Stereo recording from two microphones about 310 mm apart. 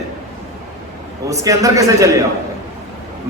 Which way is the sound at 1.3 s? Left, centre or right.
Centre.